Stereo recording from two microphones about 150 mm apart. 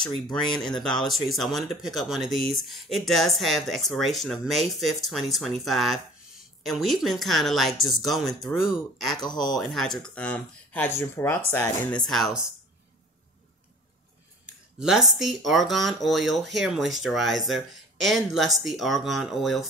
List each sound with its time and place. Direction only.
0.0 s speech: 5° left (ahead or behind)
9.2 s speech: 25° left (ahead or behind)
9.6 s speech: centre (ahead or behind)
14.4 s speech: 5° right (ahead or behind)